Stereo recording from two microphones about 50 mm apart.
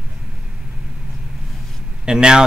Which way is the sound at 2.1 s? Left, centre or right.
Centre.